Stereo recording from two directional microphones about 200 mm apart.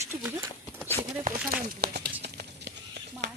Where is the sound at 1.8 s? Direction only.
55° right (ahead or behind).